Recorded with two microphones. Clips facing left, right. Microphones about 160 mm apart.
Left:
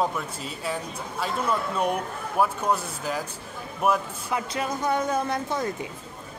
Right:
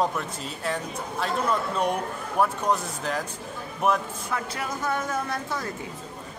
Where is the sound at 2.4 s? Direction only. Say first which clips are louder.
Even; 5° left (ahead or behind).